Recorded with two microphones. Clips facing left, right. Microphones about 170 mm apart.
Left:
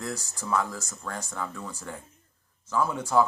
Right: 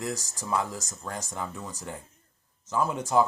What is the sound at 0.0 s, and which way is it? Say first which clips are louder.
Speech: right 1 dB; 15° right (ahead or behind).